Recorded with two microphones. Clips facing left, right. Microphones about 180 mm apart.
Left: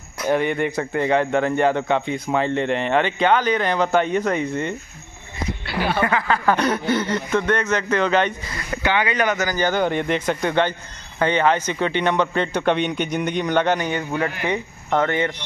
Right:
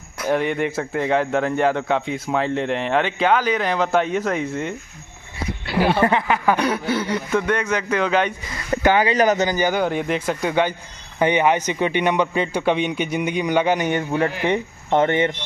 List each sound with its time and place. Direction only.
0.2 s a man's voice: centre (ahead or behind)
5.9 s speech: 30° right (ahead or behind)
6.2 s a man's voice: 15° right (ahead or behind)
8.8 s speech: 40° right (ahead or behind)
9.4 s a man's voice: 15° right (ahead or behind)
13.7 s speech: 20° right (ahead or behind)